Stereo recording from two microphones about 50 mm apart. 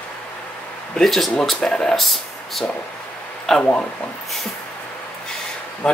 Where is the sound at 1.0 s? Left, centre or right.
Centre.